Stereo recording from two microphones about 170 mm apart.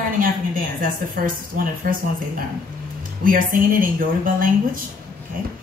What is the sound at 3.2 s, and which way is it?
A woman's voice, 55° right (ahead or behind).